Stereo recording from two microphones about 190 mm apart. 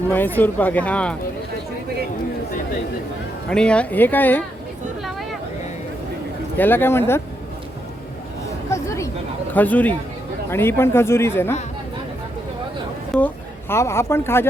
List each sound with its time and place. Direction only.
0.1 s speech: 10° left (ahead or behind)
3.5 s speech: 5° left (ahead or behind)
6.6 s speech: 10° left (ahead or behind)
8.7 s a sound: 15° left (ahead or behind)
9.5 s speech: 10° left (ahead or behind)
13.1 s speech: 10° left (ahead or behind)